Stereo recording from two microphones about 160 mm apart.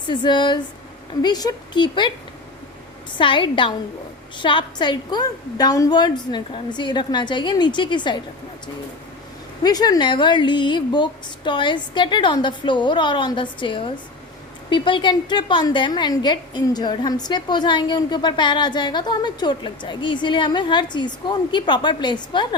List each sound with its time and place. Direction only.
0.1 s a woman's voice: 30° left (ahead or behind)
3.2 s a woman's voice: 30° left (ahead or behind)
9.6 s a woman's voice: 25° left (ahead or behind)